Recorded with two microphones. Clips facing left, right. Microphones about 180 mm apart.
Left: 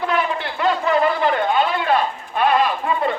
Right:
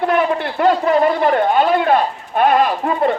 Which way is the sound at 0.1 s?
50° right (ahead or behind).